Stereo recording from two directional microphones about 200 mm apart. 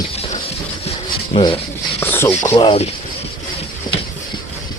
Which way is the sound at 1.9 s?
10° left (ahead or behind).